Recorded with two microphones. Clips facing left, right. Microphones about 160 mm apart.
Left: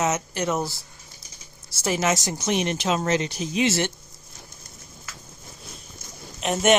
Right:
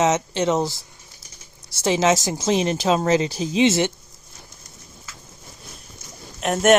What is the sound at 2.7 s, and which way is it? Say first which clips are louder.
Speech: right 5 dB; 35° right (ahead or behind).